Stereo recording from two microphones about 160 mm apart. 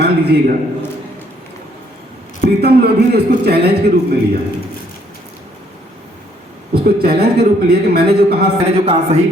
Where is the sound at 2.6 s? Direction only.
90° right.